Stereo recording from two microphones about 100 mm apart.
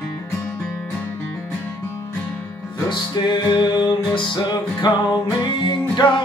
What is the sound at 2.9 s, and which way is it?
Music, 50° left (ahead or behind).